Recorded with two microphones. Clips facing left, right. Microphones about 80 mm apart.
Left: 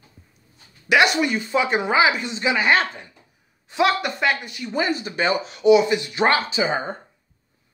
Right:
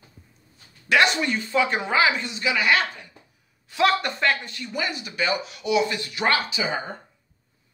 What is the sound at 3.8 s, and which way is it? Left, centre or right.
Speech, centre.